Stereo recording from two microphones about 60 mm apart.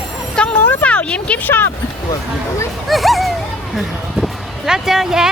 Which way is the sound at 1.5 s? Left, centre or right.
Left.